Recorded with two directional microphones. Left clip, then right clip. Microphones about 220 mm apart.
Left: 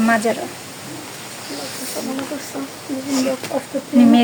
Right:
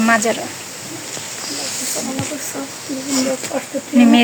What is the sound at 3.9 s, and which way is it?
Speech, 5° right (ahead or behind).